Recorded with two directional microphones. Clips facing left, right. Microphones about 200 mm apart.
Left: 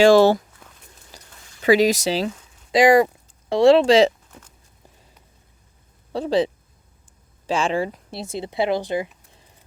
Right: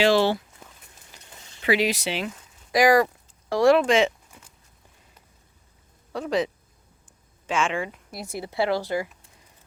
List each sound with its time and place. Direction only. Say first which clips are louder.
0.0 s speech: left 7 dB; 45° left (ahead or behind)
1.1 s a sound: left 6 dB; 40° left (ahead or behind)
1.6 s speech: left 7 dB; 40° left (ahead or behind)
2.7 s speech: left 4 dB; 25° left (ahead or behind)
6.1 s speech: left 5 dB; 30° left (ahead or behind)